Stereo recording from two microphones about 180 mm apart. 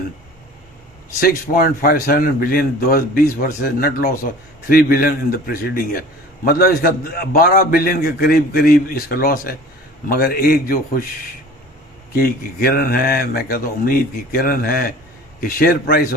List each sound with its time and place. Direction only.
1.2 s a man's voice: 55° left (ahead or behind)
12.1 s a man's voice: 55° left (ahead or behind)